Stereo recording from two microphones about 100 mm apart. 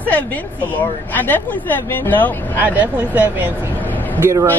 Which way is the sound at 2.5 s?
20° right (ahead or behind).